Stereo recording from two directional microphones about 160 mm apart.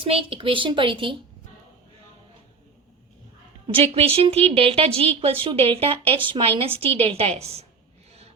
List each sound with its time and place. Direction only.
0.0 s a woman's voice: 35° right (ahead or behind)
3.7 s a woman's voice: 35° right (ahead or behind)